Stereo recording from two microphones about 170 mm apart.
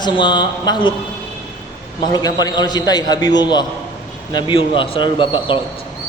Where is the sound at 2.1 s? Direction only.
25° left (ahead or behind).